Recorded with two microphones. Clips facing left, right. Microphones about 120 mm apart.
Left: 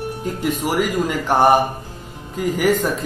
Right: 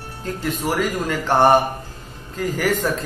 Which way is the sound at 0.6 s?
15° left (ahead or behind).